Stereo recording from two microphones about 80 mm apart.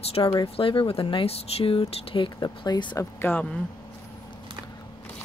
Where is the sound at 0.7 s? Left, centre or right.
Left.